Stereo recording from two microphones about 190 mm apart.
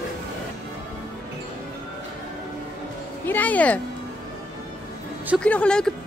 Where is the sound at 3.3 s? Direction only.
10° left (ahead or behind).